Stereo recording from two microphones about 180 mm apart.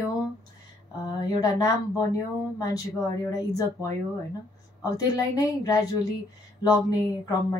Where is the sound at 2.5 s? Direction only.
20° left (ahead or behind).